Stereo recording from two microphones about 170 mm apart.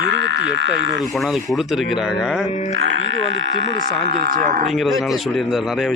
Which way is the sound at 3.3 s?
90° right.